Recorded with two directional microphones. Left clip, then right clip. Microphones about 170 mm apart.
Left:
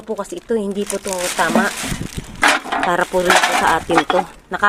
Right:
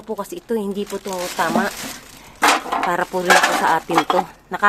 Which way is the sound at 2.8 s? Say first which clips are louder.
Left 6 dB; centre (ahead or behind).